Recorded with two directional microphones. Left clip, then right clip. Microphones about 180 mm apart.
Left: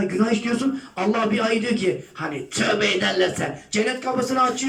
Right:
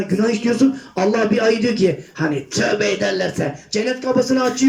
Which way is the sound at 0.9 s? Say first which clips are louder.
Right 4 dB; 30° right (ahead or behind).